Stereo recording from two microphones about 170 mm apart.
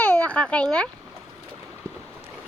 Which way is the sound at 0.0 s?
5° left (ahead or behind).